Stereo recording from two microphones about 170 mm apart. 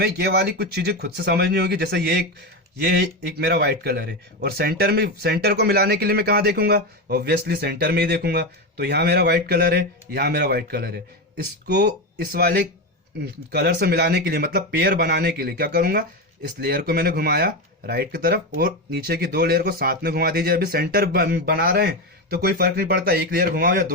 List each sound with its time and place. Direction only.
0.0 s speech: 75° right (ahead or behind); by 23.9 s 55° right (ahead or behind)